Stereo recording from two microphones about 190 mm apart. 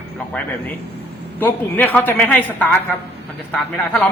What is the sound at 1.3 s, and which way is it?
A woman's voice, 10° left (ahead or behind).